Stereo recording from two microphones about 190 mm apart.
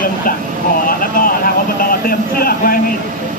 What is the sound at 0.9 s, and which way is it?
Speech, 50° left (ahead or behind).